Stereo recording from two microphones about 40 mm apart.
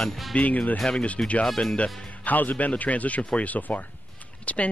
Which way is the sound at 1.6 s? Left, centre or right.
Left.